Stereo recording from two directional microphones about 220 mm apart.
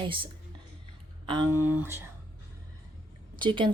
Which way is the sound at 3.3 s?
20° right (ahead or behind).